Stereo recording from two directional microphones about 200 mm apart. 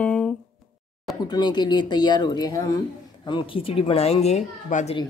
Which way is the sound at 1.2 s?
20° left (ahead or behind).